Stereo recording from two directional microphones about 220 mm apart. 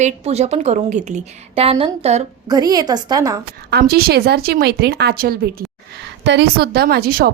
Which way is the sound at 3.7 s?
45° right (ahead or behind).